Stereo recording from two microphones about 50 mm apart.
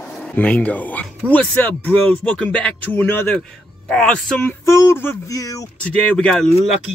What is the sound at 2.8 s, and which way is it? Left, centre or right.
Speech, left.